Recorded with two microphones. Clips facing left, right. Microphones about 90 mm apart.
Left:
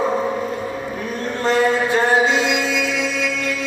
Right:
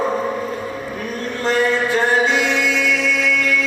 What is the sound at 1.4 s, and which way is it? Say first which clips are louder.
Mantra: left 1 dB; 30° left (ahead or behind).